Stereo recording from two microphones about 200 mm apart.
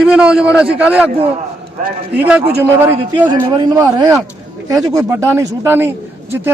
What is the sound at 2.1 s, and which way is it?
A man's voice, 5° right (ahead or behind).